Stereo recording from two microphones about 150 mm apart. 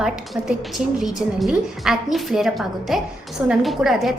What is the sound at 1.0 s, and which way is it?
A woman's voice, centre (ahead or behind).